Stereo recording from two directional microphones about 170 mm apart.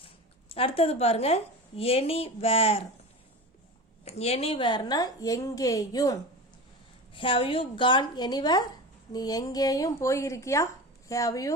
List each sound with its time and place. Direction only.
0.5 s a woman's voice: 35° left (ahead or behind)
4.0 s a woman's voice: 35° left (ahead or behind); by 6.1 s 20° left (ahead or behind)
7.1 s a woman's voice: 30° left (ahead or behind)